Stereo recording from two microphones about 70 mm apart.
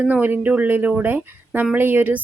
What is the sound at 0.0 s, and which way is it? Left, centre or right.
A woman's voice, right.